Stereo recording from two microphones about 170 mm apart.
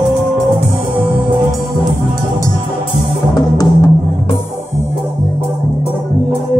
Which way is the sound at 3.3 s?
20° left (ahead or behind).